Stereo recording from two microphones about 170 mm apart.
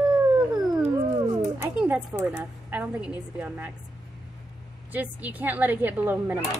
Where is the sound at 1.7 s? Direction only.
10° right (ahead or behind).